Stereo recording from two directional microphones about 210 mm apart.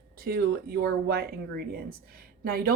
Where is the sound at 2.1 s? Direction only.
45° right (ahead or behind).